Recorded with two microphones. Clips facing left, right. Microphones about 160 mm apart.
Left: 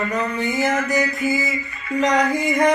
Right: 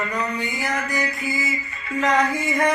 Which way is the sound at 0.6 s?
20° left (ahead or behind).